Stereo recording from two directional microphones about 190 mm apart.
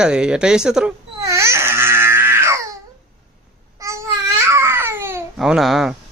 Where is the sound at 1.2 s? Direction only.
15° right (ahead or behind).